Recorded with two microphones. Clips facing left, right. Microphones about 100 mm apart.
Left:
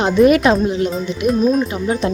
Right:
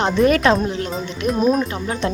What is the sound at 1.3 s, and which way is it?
Speech, 15° right (ahead or behind).